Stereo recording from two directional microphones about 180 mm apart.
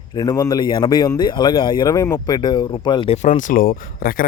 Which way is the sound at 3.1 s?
45° left (ahead or behind).